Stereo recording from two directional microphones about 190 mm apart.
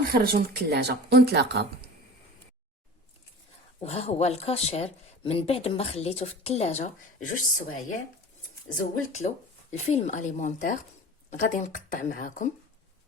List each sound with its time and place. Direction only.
0.1 s speech: 55° right (ahead or behind)
3.8 s speech: 35° left (ahead or behind)
8.8 s speech: 35° left (ahead or behind)